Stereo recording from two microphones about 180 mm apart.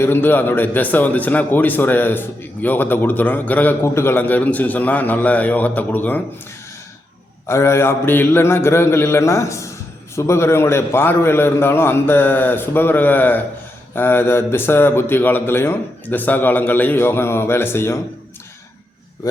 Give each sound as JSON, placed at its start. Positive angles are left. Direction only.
{"t": 0.0, "sound": "a man's voice", "side_deg": 10}
{"t": 7.4, "sound": "a man's voice", "side_deg": 15}